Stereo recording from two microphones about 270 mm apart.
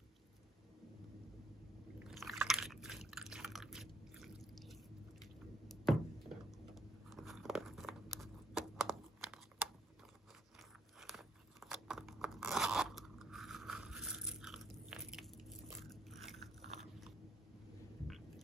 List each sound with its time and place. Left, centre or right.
2.0 s biting: centre
5.2 s squish: centre
11.0 s biting: centre
18.0 s vehicle: centre